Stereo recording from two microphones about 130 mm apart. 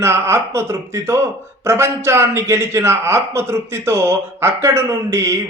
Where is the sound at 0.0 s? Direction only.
20° right (ahead or behind).